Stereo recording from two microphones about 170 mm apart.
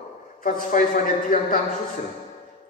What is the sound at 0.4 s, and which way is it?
A man's voice, 50° left (ahead or behind).